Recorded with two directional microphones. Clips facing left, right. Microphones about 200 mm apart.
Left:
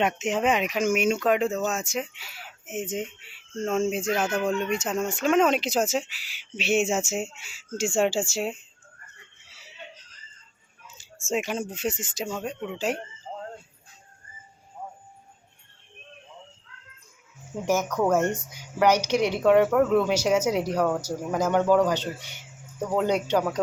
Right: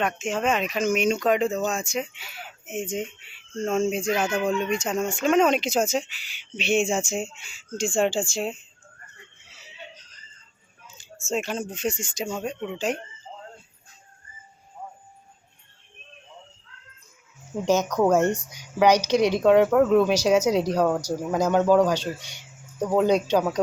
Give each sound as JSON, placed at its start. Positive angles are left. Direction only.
{"t": 0.0, "sound": "speech", "side_deg": 20}
{"t": 11.3, "sound": "speech", "side_deg": 10}
{"t": 13.3, "sound": "a sound", "side_deg": 50}
{"t": 17.7, "sound": "speech", "side_deg": -15}